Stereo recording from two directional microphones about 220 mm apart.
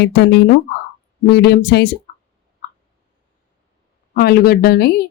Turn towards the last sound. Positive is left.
turn(degrees=45)  # may be behind; listen again after turning